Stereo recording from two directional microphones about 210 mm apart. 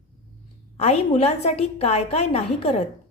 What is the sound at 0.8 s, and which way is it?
A woman's voice, 30° left (ahead or behind).